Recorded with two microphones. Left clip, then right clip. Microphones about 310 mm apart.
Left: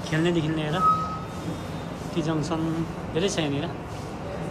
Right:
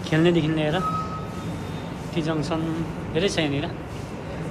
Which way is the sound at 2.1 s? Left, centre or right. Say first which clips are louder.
Right 2 dB; centre.